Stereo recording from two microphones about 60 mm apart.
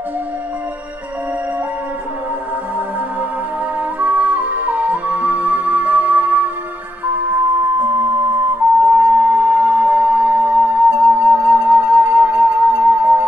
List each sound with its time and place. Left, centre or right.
4.0 s music: right
8.8 s music: right